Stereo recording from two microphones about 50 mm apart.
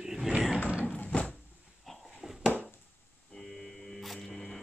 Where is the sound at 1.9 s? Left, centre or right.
Centre.